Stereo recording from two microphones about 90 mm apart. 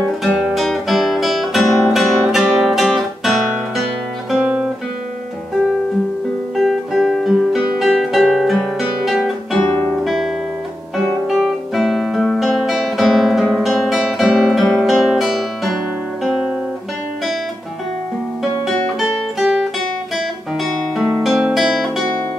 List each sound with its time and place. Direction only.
0.4 s music: centre (ahead or behind)
6.5 s music: centre (ahead or behind)
9.6 s guitar: 15° left (ahead or behind)
10.0 s guitar: centre (ahead or behind)
18.9 s music: centre (ahead or behind)
20.2 s guitar: centre (ahead or behind)